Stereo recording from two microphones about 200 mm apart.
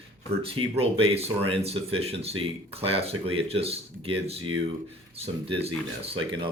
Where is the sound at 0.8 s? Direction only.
30° right (ahead or behind).